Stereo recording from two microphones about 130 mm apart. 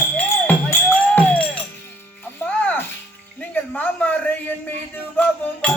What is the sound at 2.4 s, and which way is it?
Music, 20° left (ahead or behind).